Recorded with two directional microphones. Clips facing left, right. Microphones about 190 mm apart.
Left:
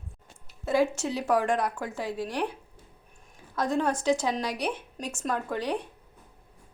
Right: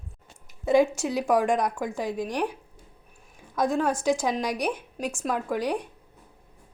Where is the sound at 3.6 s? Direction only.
10° right (ahead or behind).